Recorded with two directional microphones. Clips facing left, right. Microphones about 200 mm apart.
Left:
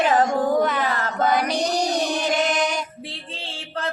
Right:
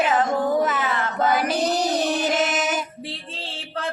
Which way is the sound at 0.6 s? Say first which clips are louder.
Left 1 dB; 5° right (ahead or behind).